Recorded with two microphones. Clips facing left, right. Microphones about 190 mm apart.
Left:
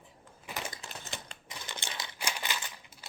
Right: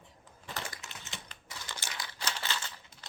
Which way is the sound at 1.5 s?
20° left (ahead or behind).